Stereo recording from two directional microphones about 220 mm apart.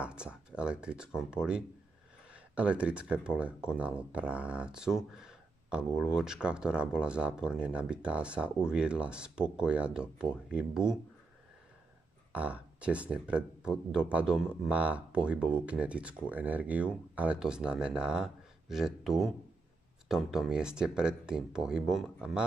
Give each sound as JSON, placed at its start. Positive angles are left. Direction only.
{"t": 0.0, "sound": "speech", "side_deg": -5}
{"t": 12.3, "sound": "speech", "side_deg": -5}